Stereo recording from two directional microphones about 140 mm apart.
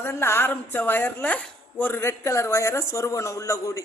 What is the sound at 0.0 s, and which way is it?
A man's voice, 20° left (ahead or behind).